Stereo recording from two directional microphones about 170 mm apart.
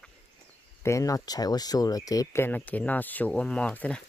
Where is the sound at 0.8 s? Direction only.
20° left (ahead or behind).